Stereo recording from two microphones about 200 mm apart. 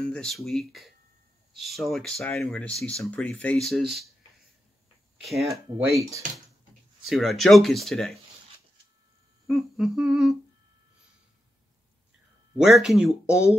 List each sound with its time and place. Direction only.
0.0 s speech: 5° left (ahead or behind)
5.9 s speech: 15° right (ahead or behind)
7.1 s speech: centre (ahead or behind)
9.5 s speech: centre (ahead or behind)
12.5 s speech: centre (ahead or behind)